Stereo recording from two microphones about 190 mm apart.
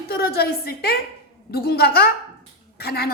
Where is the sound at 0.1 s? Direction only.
55° left (ahead or behind).